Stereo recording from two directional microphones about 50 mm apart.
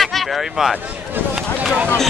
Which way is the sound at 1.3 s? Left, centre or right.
Right.